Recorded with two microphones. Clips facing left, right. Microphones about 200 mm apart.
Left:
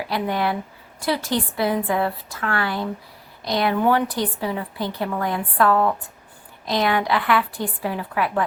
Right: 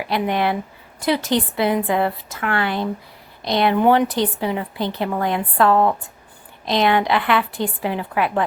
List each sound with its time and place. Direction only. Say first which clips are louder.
0.1 s a woman's voice: right 3 dB; 20° right (ahead or behind)